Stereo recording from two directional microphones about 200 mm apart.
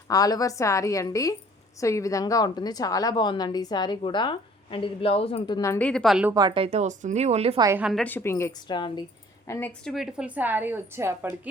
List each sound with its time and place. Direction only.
0.1 s a woman's voice: 20° left (ahead or behind)
5.5 s a woman's voice: 15° left (ahead or behind); by 6.3 s 5° right (ahead or behind)
6.3 s speech: 25° right (ahead or behind)
7.6 s a woman's voice: 10° right (ahead or behind)
8.0 s a woman's voice: 10° left (ahead or behind)
9.5 s a woman's voice: 10° left (ahead or behind); by 11.3 s 10° right (ahead or behind)